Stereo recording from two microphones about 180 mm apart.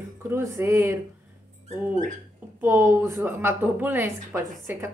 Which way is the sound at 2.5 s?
15° right (ahead or behind).